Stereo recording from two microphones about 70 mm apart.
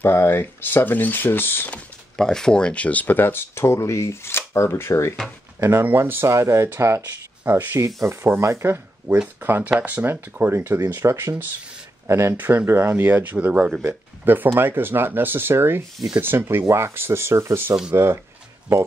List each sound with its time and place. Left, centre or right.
0.0 s speech: left
1.7 s speech: centre; by 5.1 s left
5.6 s speech: right
6.2 s speech: right
7.0 s speech: right
12.4 s speech: right